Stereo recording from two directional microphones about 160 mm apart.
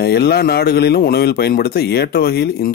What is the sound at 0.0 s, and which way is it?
Speech, 85° left.